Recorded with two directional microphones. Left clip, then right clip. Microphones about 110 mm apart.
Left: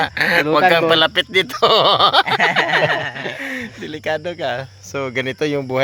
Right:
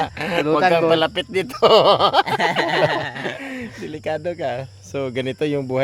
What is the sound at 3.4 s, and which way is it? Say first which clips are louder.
Speech: left 4 dB; 5° right (ahead or behind).